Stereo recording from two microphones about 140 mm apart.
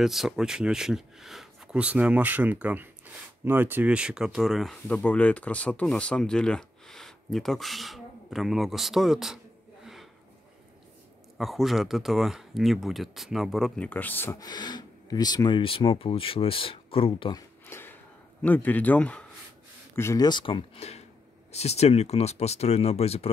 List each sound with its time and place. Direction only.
0.0 s speech: centre (ahead or behind)
11.3 s speech: centre (ahead or behind)
13.8 s speech: 10° left (ahead or behind)
14.5 s speech: 30° left (ahead or behind)
17.4 s a sound: 15° left (ahead or behind)
18.4 s speech: 10° left (ahead or behind)
20.0 s speech: 20° left (ahead or behind)
20.2 s speech: 35° left (ahead or behind)